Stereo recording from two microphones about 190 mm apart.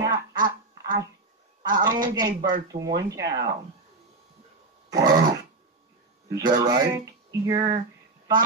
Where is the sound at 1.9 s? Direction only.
20° right (ahead or behind).